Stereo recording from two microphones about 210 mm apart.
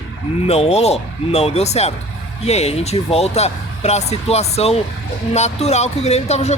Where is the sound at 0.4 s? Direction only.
30° left (ahead or behind).